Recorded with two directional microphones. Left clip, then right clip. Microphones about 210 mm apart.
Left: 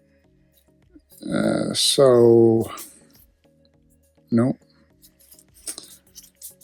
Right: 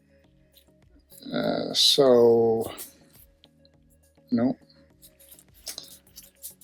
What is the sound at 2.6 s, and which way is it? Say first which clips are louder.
Music: left 2 dB; 30° left (ahead or behind).